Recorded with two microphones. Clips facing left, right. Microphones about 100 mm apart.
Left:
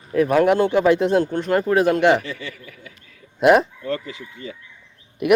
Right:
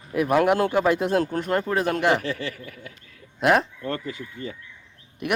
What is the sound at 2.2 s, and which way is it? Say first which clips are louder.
Speech: right 3 dB; 65° right (ahead or behind).